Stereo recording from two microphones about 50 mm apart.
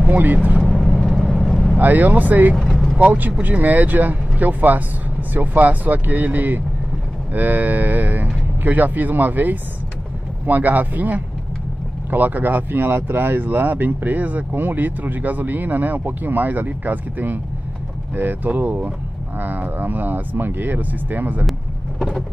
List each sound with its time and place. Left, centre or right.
0.6 s vehicle: centre
1.8 s speech: right
2.5 s vehicle: centre
3.0 s speech: right